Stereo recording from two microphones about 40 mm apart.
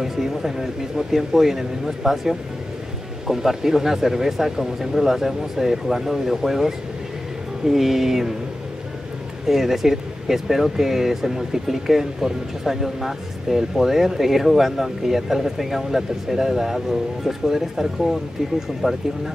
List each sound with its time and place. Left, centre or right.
0.0 s speech: centre
9.5 s speech: centre